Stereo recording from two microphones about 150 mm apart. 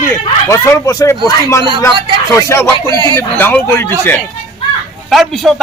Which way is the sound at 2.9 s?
30° right (ahead or behind).